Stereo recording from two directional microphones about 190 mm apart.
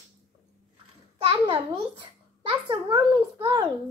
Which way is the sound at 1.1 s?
25° right (ahead or behind).